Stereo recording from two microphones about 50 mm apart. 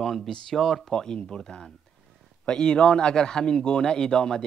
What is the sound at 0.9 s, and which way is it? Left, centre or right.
A man's voice, centre.